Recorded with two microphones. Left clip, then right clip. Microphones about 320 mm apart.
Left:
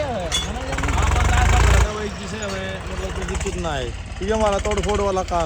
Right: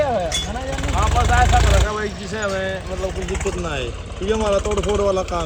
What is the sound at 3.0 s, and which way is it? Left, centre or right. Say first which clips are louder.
Speech: right 3 dB; centre.